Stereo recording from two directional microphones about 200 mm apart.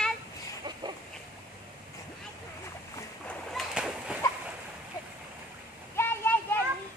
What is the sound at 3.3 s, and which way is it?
Splash, centre (ahead or behind).